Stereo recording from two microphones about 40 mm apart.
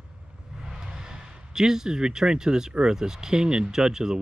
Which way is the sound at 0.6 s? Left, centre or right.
Centre.